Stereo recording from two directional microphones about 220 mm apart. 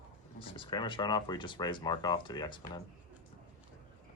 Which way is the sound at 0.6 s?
20° left (ahead or behind).